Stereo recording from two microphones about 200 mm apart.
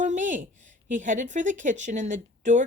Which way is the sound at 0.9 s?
40° right (ahead or behind).